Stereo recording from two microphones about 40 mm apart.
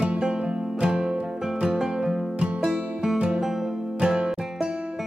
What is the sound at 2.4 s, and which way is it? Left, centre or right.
Music, right.